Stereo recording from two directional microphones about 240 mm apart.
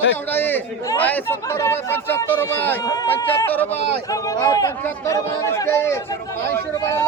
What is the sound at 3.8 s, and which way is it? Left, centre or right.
Speech, right.